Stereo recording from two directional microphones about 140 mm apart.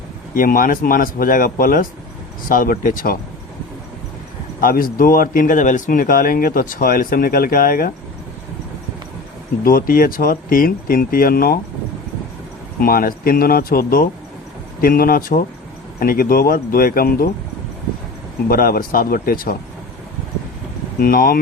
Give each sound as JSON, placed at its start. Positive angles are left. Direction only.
{"t": 0.3, "sound": "speech", "side_deg": 85}
{"t": 2.5, "sound": "speech", "side_deg": 80}
{"t": 4.6, "sound": "speech", "side_deg": 90}
{"t": 9.6, "sound": "speech", "side_deg": 90}
{"t": 12.8, "sound": "speech", "side_deg": 90}
{"t": 18.4, "sound": "speech", "side_deg": 90}
{"t": 21.0, "sound": "speech", "side_deg": 90}